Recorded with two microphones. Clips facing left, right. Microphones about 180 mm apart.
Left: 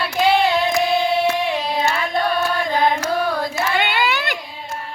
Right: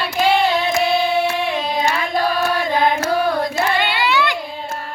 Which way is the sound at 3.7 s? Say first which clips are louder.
Right 2 dB; 50° left (ahead or behind).